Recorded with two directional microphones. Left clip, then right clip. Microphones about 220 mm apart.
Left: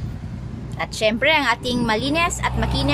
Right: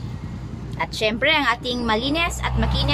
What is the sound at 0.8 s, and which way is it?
A woman's voice, 10° left (ahead or behind).